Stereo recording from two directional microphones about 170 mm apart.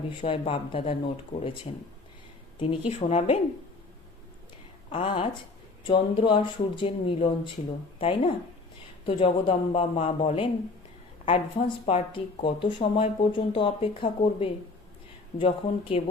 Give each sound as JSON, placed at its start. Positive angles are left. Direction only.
{"t": 0.2, "sound": "speech", "side_deg": 30}
{"t": 2.6, "sound": "speech", "side_deg": 35}
{"t": 4.9, "sound": "speech", "side_deg": 30}
{"t": 11.9, "sound": "speech", "side_deg": 35}